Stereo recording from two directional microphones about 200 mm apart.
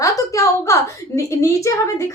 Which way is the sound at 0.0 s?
15° left (ahead or behind).